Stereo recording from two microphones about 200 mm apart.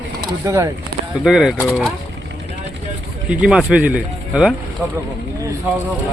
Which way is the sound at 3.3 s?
5° right (ahead or behind).